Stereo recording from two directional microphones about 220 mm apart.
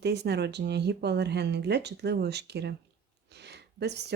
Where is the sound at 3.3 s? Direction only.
50° right (ahead or behind).